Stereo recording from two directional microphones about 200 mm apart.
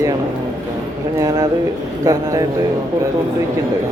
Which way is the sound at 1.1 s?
20° right (ahead or behind).